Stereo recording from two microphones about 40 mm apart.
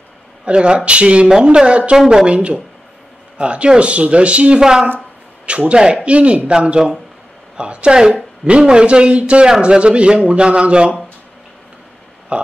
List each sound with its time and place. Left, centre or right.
0.5 s a man's voice: right
2.0 s a woman's voice: centre
2.2 s a man's voice: right
4.6 s a woman's voice: centre
5.5 s a man's voice: right
12.3 s speech: right